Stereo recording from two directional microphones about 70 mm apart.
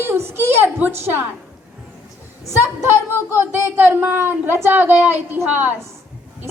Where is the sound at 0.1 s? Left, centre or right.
Right.